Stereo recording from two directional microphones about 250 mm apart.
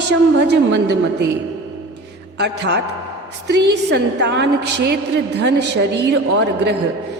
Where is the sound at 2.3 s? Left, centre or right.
Right.